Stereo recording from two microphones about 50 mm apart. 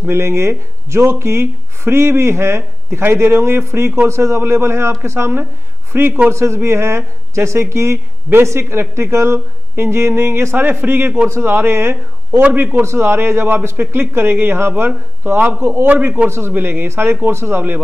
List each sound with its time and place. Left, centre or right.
0.1 s speech: right
5.9 s a man's voice: right
6.3 s a man's voice: right
12.8 s a man's voice: right
16.5 s a man's voice: right